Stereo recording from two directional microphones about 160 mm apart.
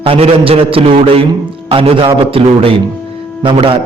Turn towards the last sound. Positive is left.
turn(degrees=-35)  # may be behind; listen again after turning